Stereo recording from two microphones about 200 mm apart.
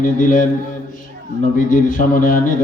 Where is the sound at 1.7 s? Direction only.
40° left (ahead or behind).